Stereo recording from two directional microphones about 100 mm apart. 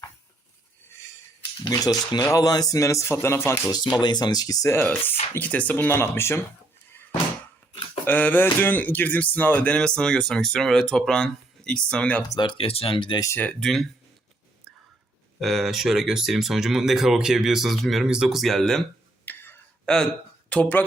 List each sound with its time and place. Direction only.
1.6 s speech: 40° left (ahead or behind); by 3.6 s 25° left (ahead or behind)
3.9 s speech: 45° left (ahead or behind)
4.7 s speech: 20° left (ahead or behind)
8.0 s speech: 15° left (ahead or behind)
12.4 s speech: 50° left (ahead or behind)
12.6 s speech: 70° left (ahead or behind)
13.6 s speech: centre (ahead or behind)
15.4 s speech: centre (ahead or behind)
19.2 s whispering: 20° left (ahead or behind)
19.8 s speech: 5° left (ahead or behind)